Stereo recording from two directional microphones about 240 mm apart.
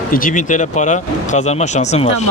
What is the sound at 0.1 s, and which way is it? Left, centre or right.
Speech, left.